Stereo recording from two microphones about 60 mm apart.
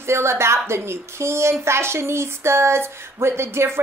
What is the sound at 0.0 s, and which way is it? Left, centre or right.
A woman's voice, right.